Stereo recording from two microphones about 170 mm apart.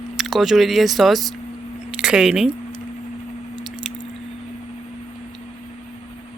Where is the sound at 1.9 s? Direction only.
5° right (ahead or behind).